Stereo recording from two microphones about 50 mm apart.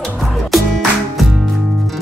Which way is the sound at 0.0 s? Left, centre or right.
Centre.